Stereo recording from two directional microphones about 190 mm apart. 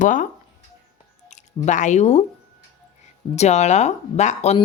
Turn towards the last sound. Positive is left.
turn(degrees=35)  # may be behind; listen again after turning